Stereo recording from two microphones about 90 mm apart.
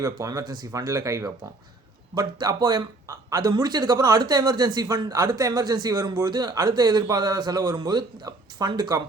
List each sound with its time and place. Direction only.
0.0 s speech: 40° right (ahead or behind)
2.1 s speech: 50° right (ahead or behind)
3.5 s speech: 50° right (ahead or behind)